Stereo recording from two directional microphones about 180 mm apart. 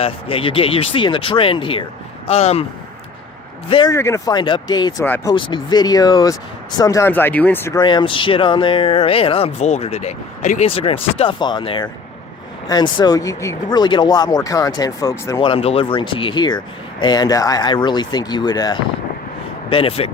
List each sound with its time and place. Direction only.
0.0 s speech: 30° left (ahead or behind)
3.7 s speech: 30° left (ahead or behind)
3.9 s speech: 15° left (ahead or behind)
5.0 s speech: 10° left (ahead or behind)
5.3 s speech: 25° left (ahead or behind)
7.8 s speech: 25° left (ahead or behind)
15.4 s speech: 30° left (ahead or behind)